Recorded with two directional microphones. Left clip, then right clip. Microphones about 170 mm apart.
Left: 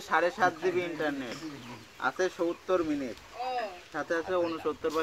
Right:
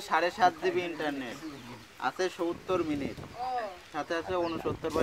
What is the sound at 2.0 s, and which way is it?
Speech, 15° right (ahead or behind).